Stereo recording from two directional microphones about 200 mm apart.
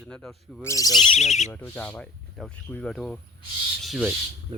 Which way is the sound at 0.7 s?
20° left (ahead or behind).